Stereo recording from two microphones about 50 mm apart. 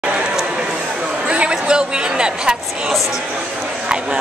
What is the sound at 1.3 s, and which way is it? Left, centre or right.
Speech, centre.